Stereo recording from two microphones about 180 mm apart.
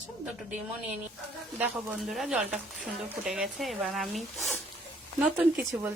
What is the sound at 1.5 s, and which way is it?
Speech, 10° right (ahead or behind).